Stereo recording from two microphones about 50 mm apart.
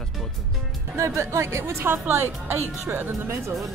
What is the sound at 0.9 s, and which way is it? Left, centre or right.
A woman's voice, right.